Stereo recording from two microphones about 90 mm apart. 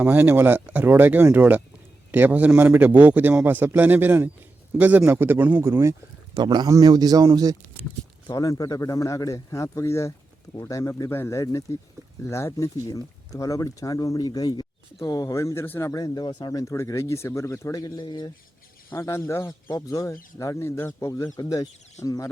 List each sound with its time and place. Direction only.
0.0 s speech: 20° right (ahead or behind)
5.6 s speech: 30° right (ahead or behind)
6.3 s speech: 55° right (ahead or behind)
6.7 s speech: 40° right (ahead or behind)
8.3 s speech: 45° left (ahead or behind)
15.6 s speech: 20° left (ahead or behind)
15.9 s speech: 45° left (ahead or behind)
18.9 s speech: 30° left (ahead or behind)